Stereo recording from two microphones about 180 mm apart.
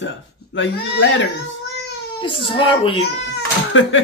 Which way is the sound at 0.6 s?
90° left.